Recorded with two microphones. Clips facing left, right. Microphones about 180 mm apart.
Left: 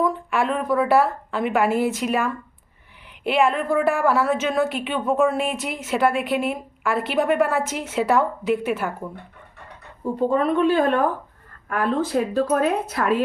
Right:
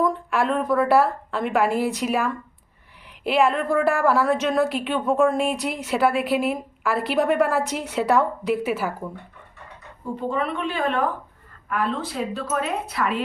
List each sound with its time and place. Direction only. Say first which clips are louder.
0.0 s a woman's voice: even; centre (ahead or behind)
10.2 s a woman's voice: left 7 dB; 40° left (ahead or behind)